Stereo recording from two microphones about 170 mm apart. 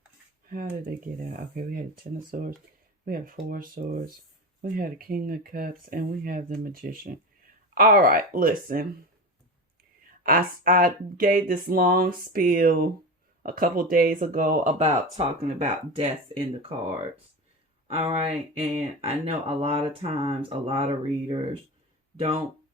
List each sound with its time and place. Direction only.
0.9 s speech: 60° right (ahead or behind)
10.2 s speech: 60° right (ahead or behind); by 22.4 s 35° right (ahead or behind)